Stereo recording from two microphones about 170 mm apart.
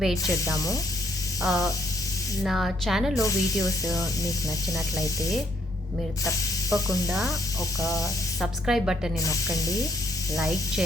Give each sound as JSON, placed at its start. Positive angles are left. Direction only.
{"t": 0.0, "sound": "speech", "side_deg": 0}
{"t": 1.4, "sound": "a sound", "side_deg": 0}
{"t": 2.4, "sound": "speech", "side_deg": 0}
{"t": 3.2, "sound": "speech", "side_deg": 20}
{"t": 7.1, "sound": "speech", "side_deg": 0}
{"t": 9.2, "sound": "speech", "side_deg": 20}
{"t": 10.3, "sound": "speech", "side_deg": 0}